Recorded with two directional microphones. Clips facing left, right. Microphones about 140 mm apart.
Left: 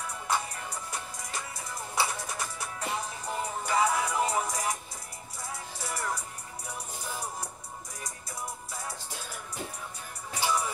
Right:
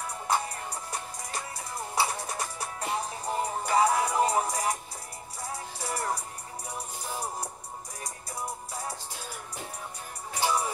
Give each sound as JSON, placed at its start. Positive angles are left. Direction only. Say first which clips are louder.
{"t": 0.0, "sound": "music", "louder": "right 2 dB", "side_deg": -35}
{"t": 8.0, "sound": "music", "louder": "right 3 dB", "side_deg": -35}
{"t": 10.4, "sound": "music", "louder": "right 2 dB", "side_deg": -35}